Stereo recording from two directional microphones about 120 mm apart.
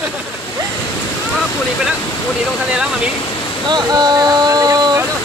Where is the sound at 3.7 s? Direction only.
35° right (ahead or behind).